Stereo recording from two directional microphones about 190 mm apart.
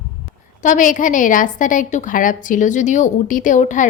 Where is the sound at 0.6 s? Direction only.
40° left (ahead or behind).